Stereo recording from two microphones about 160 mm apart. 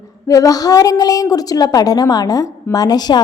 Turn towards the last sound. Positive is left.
turn(degrees=25)  # may be behind; listen again after turning